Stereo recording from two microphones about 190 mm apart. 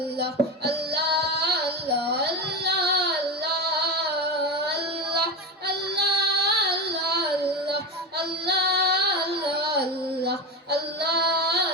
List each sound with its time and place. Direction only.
0.2 s female singing: 60° right (ahead or behind)
4.6 s child singing: 60° right (ahead or behind)
8.4 s female singing: 60° right (ahead or behind)